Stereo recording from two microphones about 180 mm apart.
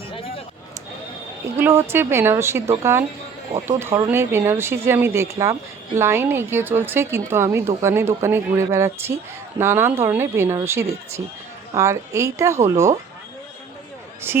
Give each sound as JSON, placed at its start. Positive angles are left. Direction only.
{"t": 0.1, "sound": "a sound", "side_deg": 30}
{"t": 1.5, "sound": "speech", "side_deg": -10}
{"t": 14.3, "sound": "speech", "side_deg": -10}